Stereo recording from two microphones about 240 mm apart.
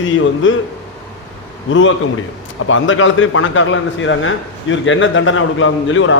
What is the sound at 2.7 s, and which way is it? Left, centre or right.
A man's voice, left.